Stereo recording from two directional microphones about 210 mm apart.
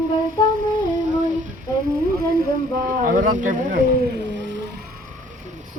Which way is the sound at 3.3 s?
40° right (ahead or behind).